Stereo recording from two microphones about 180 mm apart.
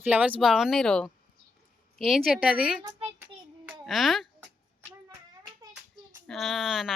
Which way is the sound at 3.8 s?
Centre (ahead or behind).